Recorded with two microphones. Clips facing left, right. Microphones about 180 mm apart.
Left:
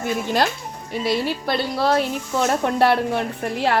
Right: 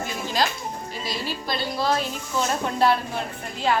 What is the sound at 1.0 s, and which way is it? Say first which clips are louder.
Speech: left 9 dB; 65° left (ahead or behind).